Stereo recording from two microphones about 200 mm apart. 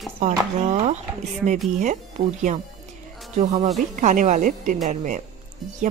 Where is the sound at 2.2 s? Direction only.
30° right (ahead or behind).